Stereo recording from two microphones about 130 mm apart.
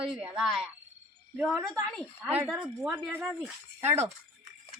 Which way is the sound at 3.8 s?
55° right (ahead or behind).